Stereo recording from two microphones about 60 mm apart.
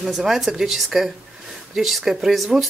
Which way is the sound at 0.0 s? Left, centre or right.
Centre.